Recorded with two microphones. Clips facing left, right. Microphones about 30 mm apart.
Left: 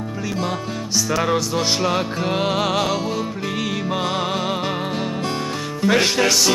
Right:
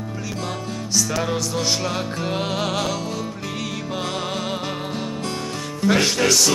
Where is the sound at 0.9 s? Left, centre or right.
Centre.